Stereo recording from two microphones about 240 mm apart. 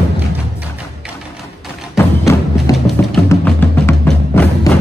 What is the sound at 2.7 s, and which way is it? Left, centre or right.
Music, centre.